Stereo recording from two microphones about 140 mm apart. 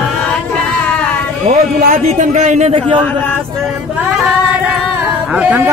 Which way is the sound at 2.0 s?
55° right (ahead or behind).